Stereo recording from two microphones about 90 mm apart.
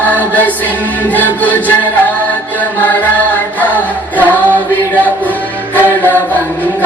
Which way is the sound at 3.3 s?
20° left (ahead or behind).